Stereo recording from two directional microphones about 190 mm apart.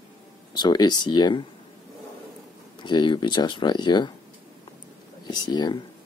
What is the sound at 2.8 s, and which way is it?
Speech, 25° left (ahead or behind).